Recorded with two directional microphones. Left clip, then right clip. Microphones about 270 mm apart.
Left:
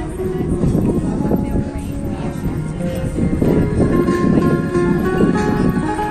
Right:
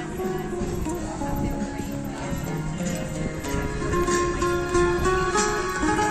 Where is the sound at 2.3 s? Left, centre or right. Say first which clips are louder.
Left 5 dB; right.